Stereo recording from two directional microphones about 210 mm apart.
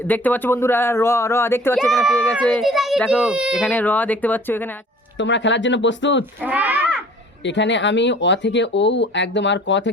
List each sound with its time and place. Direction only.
0.1 s speech: 10° left (ahead or behind)
1.7 s speech: centre (ahead or behind)
3.7 s speech: 10° left (ahead or behind)
5.1 s speech: 60° left (ahead or behind)
6.4 s a child's voice: 10° right (ahead or behind)
7.4 s speech: 60° left (ahead or behind)